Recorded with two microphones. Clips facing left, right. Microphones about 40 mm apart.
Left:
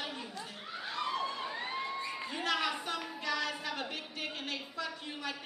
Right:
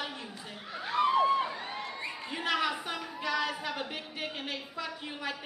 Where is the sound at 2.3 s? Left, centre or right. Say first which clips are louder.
Right 3 dB; centre.